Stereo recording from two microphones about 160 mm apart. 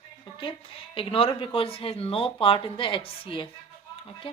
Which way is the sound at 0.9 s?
35° left (ahead or behind).